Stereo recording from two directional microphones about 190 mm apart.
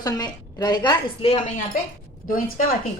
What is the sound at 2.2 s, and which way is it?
Speech, 45° left (ahead or behind).